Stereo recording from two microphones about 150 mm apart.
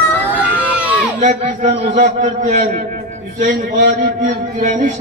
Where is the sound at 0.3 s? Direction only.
10° right (ahead or behind).